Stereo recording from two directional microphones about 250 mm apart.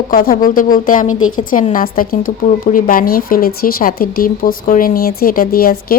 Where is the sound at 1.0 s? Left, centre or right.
Left.